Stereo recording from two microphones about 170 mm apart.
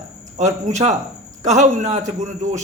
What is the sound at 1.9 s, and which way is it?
Speech, 45° right (ahead or behind).